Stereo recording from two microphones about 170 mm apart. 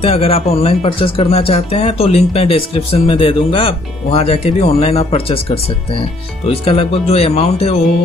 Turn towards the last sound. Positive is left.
turn(degrees=35)  # may be behind; listen again after turning